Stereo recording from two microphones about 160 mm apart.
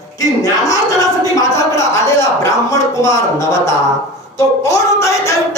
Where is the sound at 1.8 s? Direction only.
20° left (ahead or behind).